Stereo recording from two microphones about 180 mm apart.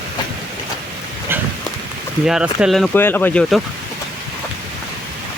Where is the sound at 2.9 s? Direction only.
10° left (ahead or behind).